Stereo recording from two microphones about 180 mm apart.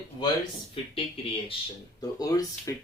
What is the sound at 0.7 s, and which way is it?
Speech, 30° left (ahead or behind).